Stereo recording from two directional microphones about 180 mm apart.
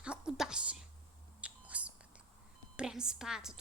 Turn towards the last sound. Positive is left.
turn(degrees=-5)  # may be behind; listen again after turning